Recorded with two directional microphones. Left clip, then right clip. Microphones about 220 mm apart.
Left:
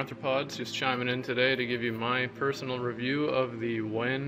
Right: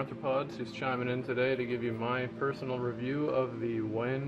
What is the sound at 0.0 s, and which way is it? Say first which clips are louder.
A man's voice: left 2 dB; 5° left (ahead or behind).